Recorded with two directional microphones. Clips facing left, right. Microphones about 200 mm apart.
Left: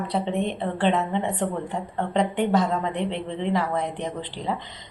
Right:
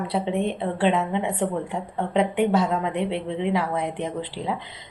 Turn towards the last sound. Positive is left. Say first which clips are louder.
# right 1 dB
turn(degrees=-5)  # may be behind; listen again after turning